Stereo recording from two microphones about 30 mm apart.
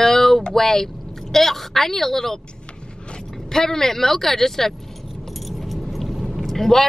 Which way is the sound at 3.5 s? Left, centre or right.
Centre.